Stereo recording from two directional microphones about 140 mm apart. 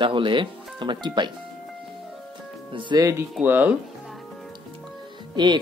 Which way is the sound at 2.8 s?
35° right (ahead or behind).